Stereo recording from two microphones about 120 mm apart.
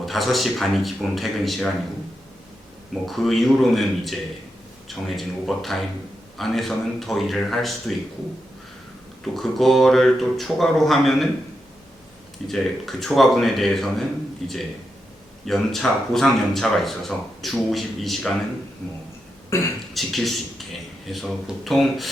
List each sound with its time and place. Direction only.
0.0 s speech: centre (ahead or behind)
3.1 s speech: centre (ahead or behind)
9.2 s speech: centre (ahead or behind)
12.5 s speech: centre (ahead or behind)
19.5 s speech: 25° left (ahead or behind)
19.9 s a man's voice: centre (ahead or behind)